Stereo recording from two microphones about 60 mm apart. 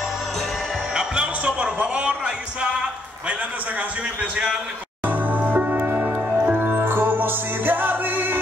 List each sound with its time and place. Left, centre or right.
0.9 s music: centre
4.2 s a man's voice: centre
5.0 s music: right